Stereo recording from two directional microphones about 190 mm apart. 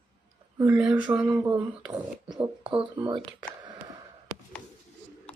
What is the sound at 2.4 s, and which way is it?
Speech, 25° right (ahead or behind).